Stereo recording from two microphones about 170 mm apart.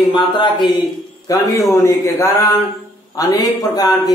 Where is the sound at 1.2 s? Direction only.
20° left (ahead or behind).